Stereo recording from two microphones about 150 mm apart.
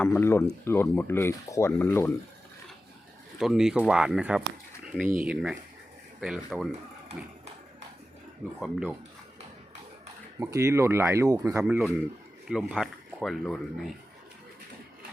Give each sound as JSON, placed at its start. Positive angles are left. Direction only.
{"t": 0.0, "sound": "speech", "side_deg": 15}
{"t": 3.3, "sound": "speech", "side_deg": 0}
{"t": 8.6, "sound": "speech", "side_deg": 0}
{"t": 10.4, "sound": "speech", "side_deg": -20}
{"t": 11.6, "sound": "speech", "side_deg": -5}